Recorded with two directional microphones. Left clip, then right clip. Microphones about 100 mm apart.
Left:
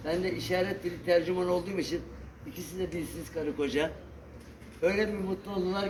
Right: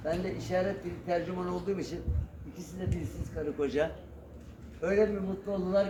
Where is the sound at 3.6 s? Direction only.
15° right (ahead or behind).